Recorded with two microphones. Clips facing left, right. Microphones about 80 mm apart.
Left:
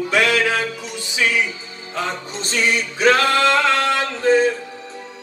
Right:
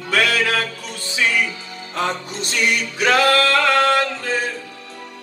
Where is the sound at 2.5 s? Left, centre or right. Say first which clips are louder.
Left 1 dB; left.